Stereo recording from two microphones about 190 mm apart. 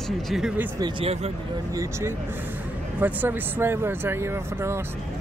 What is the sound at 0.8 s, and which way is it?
Speech, 30° right (ahead or behind).